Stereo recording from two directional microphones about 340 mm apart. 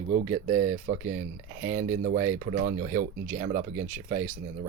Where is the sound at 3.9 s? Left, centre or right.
Right.